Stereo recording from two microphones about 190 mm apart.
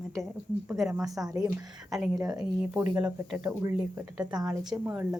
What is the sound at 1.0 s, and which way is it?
Speech, 20° right (ahead or behind).